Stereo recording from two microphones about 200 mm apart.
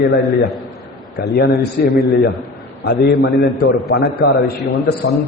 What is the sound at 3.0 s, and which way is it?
A man's voice, 50° left (ahead or behind).